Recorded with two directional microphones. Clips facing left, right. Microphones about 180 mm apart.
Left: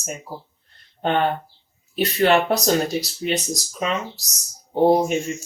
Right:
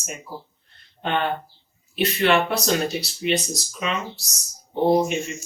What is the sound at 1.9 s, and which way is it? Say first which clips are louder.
Speech: left 2 dB; 40° left (ahead or behind).